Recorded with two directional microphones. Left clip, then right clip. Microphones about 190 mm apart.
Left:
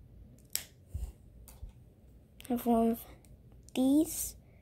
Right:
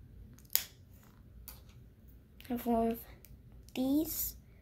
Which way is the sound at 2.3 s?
35° left (ahead or behind).